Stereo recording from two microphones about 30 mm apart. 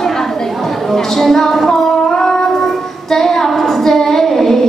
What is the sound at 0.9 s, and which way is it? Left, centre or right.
Music, centre.